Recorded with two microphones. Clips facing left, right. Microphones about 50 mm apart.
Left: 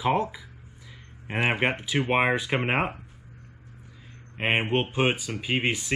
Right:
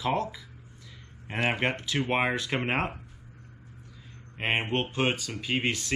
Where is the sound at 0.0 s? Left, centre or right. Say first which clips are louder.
Left 4 dB; centre.